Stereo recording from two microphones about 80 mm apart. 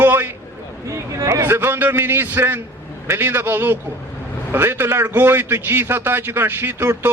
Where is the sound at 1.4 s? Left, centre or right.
Right.